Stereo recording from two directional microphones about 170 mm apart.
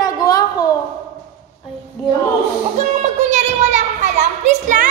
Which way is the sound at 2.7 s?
40° right (ahead or behind).